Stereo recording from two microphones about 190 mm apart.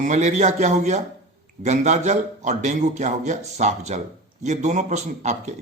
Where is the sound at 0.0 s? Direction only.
40° right (ahead or behind).